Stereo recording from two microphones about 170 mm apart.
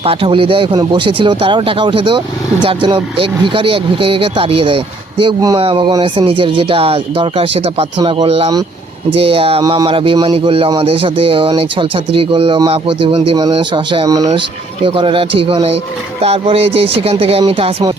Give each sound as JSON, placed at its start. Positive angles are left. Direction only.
{"t": 0.0, "sound": "a man's voice", "side_deg": -30}
{"t": 5.2, "sound": "a man's voice", "side_deg": -20}